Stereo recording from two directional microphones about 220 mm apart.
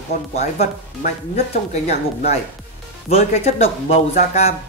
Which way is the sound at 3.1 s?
30° left (ahead or behind).